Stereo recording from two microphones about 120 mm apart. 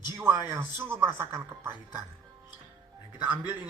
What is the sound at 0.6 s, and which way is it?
Speech, 20° right (ahead or behind).